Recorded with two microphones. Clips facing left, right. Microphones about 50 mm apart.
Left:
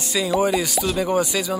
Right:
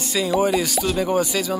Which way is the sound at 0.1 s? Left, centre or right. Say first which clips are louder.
Even; centre.